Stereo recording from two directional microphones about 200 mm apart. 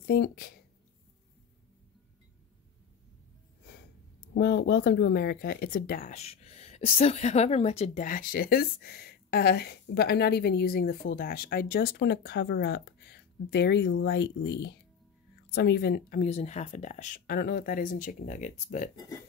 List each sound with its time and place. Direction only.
0.0 s speech: 50° left (ahead or behind)
4.3 s speech: 55° left (ahead or behind)
16.3 s speech: 35° left (ahead or behind)